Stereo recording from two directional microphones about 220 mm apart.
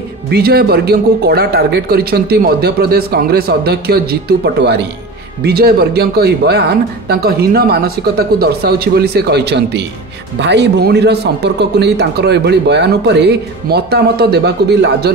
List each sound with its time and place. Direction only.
0.3 s speech: 45° right (ahead or behind)